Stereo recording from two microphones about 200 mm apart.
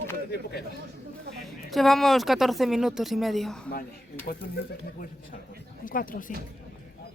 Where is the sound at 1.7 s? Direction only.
Centre (ahead or behind).